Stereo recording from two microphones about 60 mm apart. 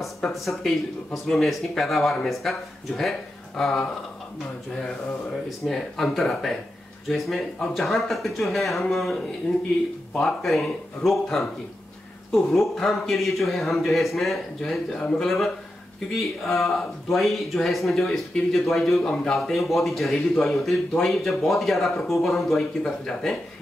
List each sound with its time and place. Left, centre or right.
0.3 s speech: centre
14.9 s speech: centre
15.1 s speech: centre